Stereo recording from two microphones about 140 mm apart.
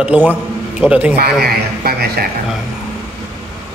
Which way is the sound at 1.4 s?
90° right.